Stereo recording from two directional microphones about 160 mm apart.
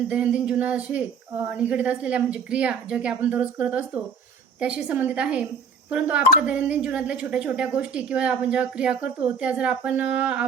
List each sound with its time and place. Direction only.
0.1 s a woman's voice: 5° right (ahead or behind)